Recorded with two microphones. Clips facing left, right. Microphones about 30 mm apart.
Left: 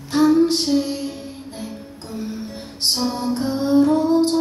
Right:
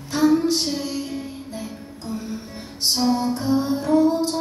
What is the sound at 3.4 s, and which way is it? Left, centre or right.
Music, left.